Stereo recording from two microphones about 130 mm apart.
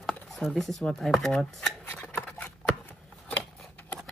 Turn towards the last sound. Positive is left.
turn(degrees=10)  # may be behind; listen again after turning